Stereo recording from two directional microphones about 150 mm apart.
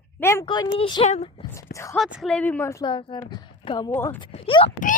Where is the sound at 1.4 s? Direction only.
20° left (ahead or behind).